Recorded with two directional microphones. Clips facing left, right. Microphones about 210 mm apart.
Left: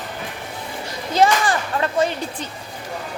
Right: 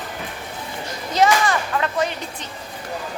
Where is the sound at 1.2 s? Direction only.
30° left (ahead or behind).